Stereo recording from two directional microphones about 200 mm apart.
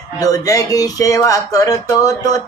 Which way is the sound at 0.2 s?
15° left (ahead or behind).